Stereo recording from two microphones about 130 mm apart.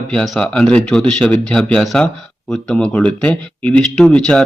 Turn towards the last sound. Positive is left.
turn(degrees=5)  # may be behind; listen again after turning